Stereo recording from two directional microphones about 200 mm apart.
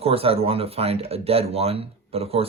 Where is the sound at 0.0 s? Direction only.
30° right (ahead or behind).